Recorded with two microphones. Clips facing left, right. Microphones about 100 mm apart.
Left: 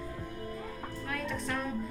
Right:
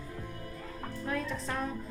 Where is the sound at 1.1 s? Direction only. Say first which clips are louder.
Right 1 dB; 30° right (ahead or behind).